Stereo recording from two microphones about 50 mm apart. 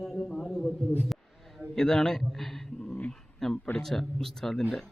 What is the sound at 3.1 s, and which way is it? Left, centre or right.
Dog, centre.